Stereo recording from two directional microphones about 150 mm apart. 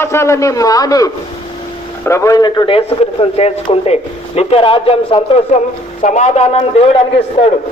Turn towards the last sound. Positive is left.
turn(degrees=40)  # may be behind; listen again after turning